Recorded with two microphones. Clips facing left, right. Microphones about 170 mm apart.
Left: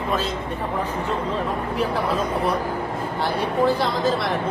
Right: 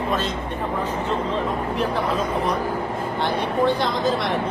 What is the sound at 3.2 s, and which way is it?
Speech, 5° left (ahead or behind).